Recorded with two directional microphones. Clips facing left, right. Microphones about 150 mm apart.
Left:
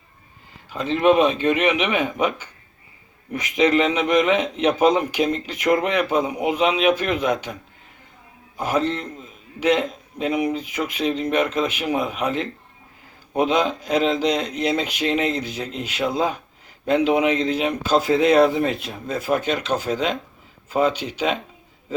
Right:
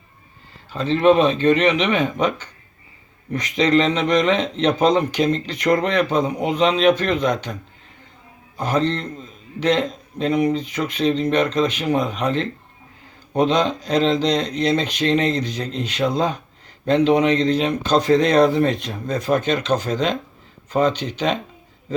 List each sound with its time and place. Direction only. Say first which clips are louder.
0.7 s speech: right 2 dB; 10° left (ahead or behind)
8.5 s speech: right 1 dB; 10° left (ahead or behind)